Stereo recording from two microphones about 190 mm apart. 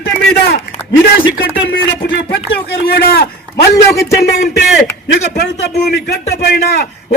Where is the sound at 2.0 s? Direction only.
60° left (ahead or behind).